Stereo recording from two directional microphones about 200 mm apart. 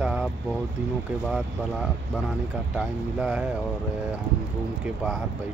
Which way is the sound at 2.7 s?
5° right (ahead or behind).